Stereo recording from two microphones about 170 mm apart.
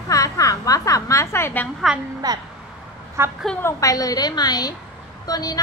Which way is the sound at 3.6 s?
20° left (ahead or behind).